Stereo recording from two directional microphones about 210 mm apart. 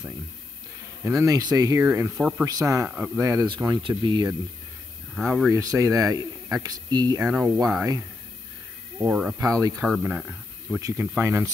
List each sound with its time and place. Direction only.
1.0 s speech: 15° right (ahead or behind)
2.4 s speech: 15° right (ahead or behind)
5.1 s speech: centre (ahead or behind)
5.5 s speech: 15° right (ahead or behind)
8.9 s speech: 5° right (ahead or behind)
9.8 s speech: centre (ahead or behind)